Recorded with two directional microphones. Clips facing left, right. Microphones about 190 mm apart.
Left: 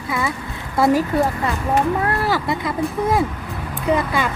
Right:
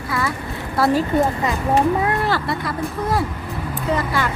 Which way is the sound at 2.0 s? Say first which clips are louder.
Right 1 dB; 5° right (ahead or behind).